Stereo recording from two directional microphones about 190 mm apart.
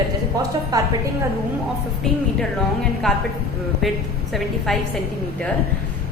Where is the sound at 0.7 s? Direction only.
20° right (ahead or behind).